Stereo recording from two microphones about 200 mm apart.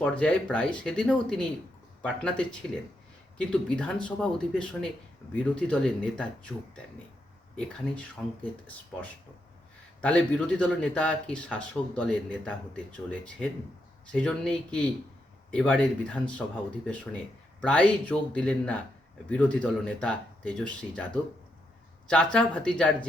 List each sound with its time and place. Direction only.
0.0 s speech: 5° left (ahead or behind)
7.5 s speech: 5° left (ahead or behind)
17.6 s speech: 5° left (ahead or behind)